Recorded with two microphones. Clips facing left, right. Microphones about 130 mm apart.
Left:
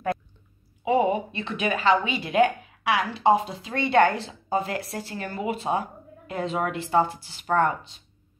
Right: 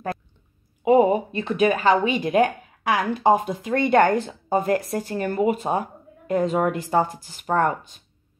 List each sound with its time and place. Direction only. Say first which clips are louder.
0.8 s speech: right 5 dB; 40° right (ahead or behind)